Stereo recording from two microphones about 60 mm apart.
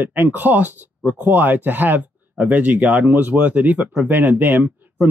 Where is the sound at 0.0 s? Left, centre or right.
Right.